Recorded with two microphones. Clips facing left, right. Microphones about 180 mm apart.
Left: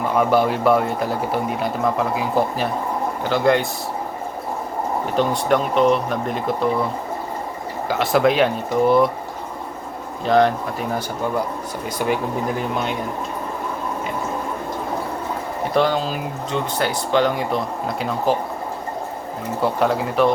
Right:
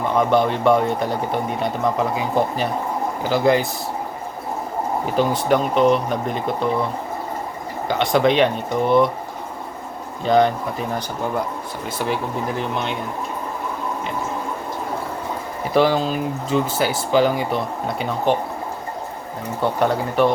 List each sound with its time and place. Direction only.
0.2 s speech: 5° left (ahead or behind)
5.1 s speech: centre (ahead or behind)
7.9 s speech: 5° left (ahead or behind)
10.2 s speech: centre (ahead or behind)
15.7 s speech: centre (ahead or behind)
19.6 s speech: centre (ahead or behind)